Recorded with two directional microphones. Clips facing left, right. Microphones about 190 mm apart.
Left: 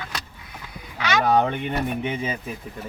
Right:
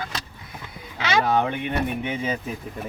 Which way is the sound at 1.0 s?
30° right (ahead or behind).